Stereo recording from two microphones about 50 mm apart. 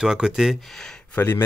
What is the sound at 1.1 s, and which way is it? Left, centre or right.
Speech, left.